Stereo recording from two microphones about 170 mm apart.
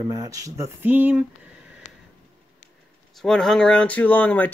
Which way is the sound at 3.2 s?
5° left (ahead or behind).